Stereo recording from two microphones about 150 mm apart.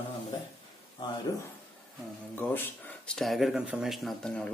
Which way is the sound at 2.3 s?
10° left (ahead or behind).